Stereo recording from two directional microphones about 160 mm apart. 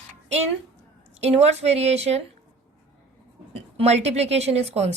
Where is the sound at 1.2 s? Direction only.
40° right (ahead or behind).